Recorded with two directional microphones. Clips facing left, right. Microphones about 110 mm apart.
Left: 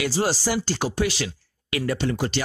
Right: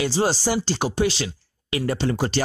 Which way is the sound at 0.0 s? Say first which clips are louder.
Right 2 dB; 25° right (ahead or behind).